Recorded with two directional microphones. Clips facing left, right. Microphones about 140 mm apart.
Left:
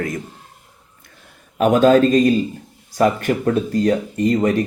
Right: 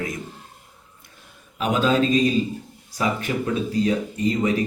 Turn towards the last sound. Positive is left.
turn(degrees=50)  # may be behind; listen again after turning